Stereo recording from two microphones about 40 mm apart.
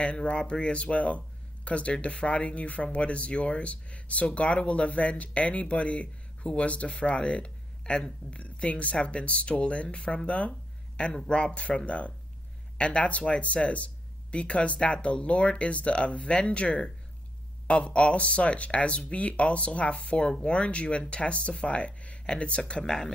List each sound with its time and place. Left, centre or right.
0.0 s speech: left
11.2 s speech: left
22.8 s speech: centre